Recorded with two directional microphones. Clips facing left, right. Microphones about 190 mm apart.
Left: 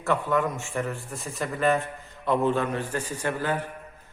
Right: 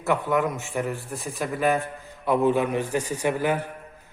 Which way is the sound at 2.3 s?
10° right (ahead or behind).